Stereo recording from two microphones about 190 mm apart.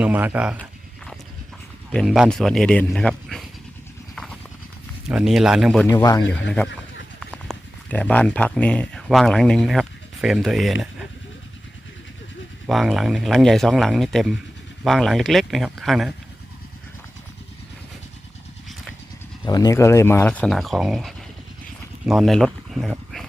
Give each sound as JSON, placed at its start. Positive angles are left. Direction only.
{"t": 0.0, "sound": "speech", "side_deg": -10}
{"t": 0.5, "sound": "a sound", "side_deg": 5}
{"t": 1.9, "sound": "speech", "side_deg": 0}
{"t": 4.1, "sound": "clip-clop", "side_deg": 5}
{"t": 5.0, "sound": "speech", "side_deg": -5}
{"t": 5.9, "sound": "speech", "side_deg": 20}
{"t": 7.2, "sound": "speech", "side_deg": 5}
{"t": 12.6, "sound": "speech", "side_deg": 0}
{"t": 19.5, "sound": "speech", "side_deg": 20}